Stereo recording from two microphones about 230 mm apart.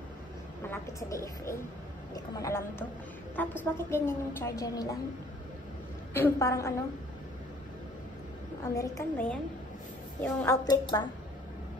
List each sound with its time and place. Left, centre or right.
0.7 s a woman's voice: centre
6.1 s a woman's voice: centre
8.7 s a woman's voice: centre